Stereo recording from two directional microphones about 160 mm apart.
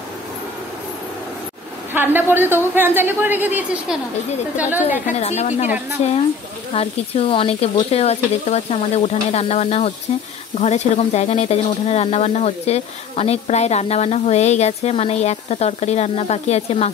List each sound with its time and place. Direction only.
2.0 s speech: 15° right (ahead or behind)
5.2 s speech: 45° left (ahead or behind)
6.0 s stir: 40° left (ahead or behind)
10.6 s speech: 45° left (ahead or behind)